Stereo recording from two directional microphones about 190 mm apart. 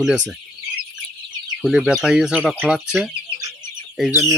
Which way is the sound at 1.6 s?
Centre (ahead or behind).